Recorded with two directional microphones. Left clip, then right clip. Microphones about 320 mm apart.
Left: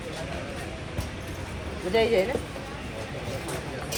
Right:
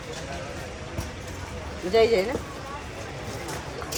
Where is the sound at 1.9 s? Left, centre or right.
Right.